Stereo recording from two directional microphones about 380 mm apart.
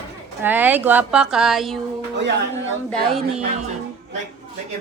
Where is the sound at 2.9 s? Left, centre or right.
Centre.